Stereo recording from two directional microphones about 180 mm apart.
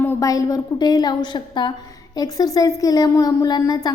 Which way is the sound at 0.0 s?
20° left (ahead or behind).